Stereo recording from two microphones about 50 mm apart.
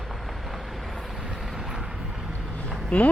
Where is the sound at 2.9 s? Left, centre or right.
Left.